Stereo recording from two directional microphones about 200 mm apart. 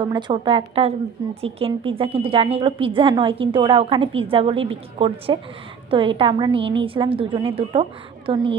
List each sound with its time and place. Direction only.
0.0 s a woman's voice: 25° right (ahead or behind)